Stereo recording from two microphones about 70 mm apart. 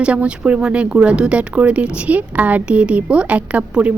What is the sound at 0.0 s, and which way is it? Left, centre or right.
Speech, centre.